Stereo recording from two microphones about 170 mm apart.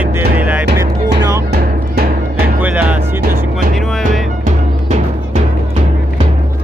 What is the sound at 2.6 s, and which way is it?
Music, 10° right (ahead or behind).